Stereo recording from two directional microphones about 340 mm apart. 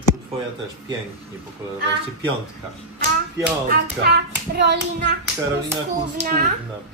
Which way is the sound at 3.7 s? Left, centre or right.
Right.